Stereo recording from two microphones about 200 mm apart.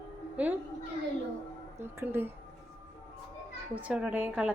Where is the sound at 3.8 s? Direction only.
5° right (ahead or behind).